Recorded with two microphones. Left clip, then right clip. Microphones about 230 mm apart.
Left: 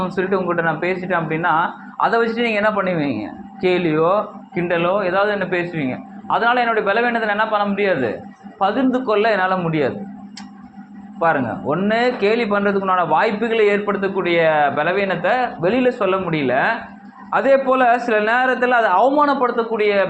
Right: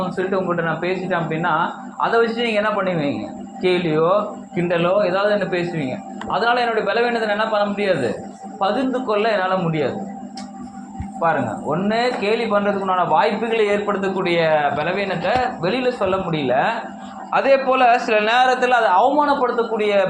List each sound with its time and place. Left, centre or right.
0.2 s a man's voice: left
11.2 s a man's voice: left